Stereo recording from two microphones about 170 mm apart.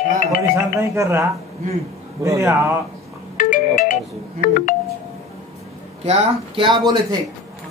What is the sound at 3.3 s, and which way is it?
Marimba, 50° left (ahead or behind).